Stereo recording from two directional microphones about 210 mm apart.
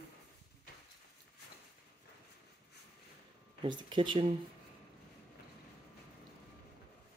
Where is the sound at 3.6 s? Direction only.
20° right (ahead or behind).